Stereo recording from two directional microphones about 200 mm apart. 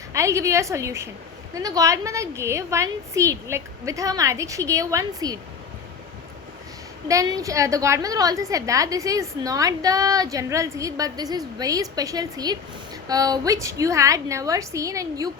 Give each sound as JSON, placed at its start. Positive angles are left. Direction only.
{"t": 0.1, "sound": "a woman's voice", "side_deg": -15}
{"t": 7.1, "sound": "a woman's voice", "side_deg": -15}